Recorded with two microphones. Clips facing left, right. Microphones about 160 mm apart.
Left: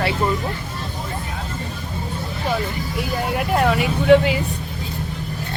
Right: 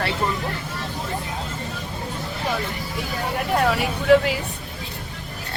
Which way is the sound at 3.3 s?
5° left (ahead or behind).